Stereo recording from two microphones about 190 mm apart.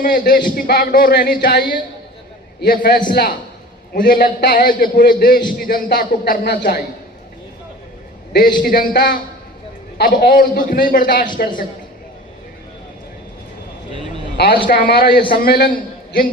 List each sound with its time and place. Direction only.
0.0 s a man's voice: 45° left (ahead or behind)
8.3 s a man's voice: 50° left (ahead or behind)
14.7 s a man's voice: 55° left (ahead or behind)